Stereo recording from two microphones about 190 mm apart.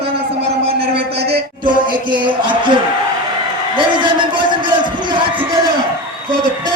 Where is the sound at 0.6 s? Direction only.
30° right (ahead or behind).